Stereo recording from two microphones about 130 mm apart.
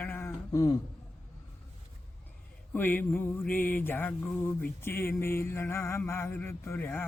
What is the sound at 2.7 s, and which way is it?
Mantra, 15° left (ahead or behind).